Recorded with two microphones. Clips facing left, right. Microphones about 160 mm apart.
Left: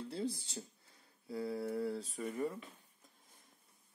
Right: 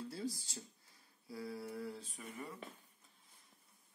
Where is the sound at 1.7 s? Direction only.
30° left (ahead or behind).